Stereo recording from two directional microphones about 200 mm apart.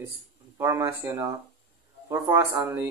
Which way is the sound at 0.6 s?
15° right (ahead or behind).